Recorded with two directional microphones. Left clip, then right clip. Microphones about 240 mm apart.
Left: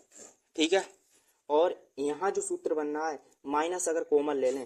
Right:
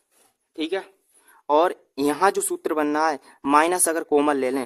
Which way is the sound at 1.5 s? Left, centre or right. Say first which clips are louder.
Right 7 dB; right.